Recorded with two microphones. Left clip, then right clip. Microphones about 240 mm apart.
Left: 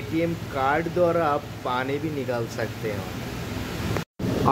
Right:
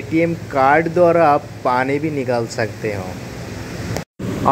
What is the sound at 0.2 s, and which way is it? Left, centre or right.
Speech, centre.